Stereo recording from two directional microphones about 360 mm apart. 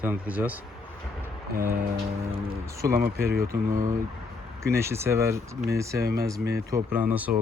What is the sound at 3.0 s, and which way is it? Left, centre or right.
Speech, right.